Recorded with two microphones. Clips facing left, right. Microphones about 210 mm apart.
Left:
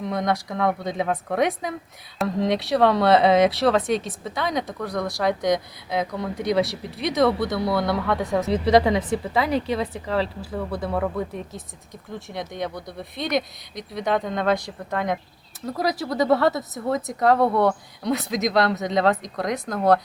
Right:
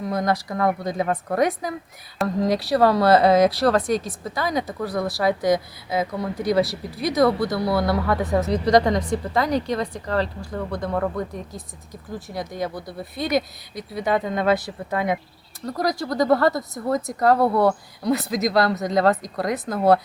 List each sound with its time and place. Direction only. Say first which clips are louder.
0.0 s speech: right 1 dB; centre (ahead or behind)
15.6 s speech: right 1 dB; 5° left (ahead or behind)